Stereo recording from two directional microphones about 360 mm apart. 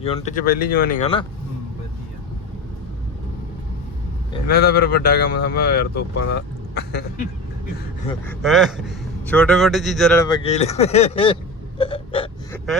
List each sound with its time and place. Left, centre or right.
0.0 s speech: centre
4.4 s speech: left
8.3 s a man's voice: centre
11.8 s gasp: centre